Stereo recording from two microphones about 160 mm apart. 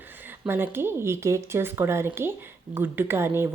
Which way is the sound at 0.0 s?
10° right (ahead or behind).